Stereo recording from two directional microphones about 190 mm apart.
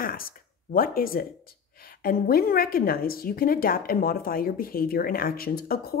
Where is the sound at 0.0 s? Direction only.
50° left (ahead or behind).